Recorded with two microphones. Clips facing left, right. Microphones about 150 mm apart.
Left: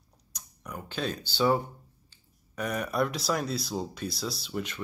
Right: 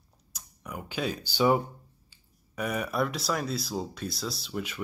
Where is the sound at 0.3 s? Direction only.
5° right (ahead or behind).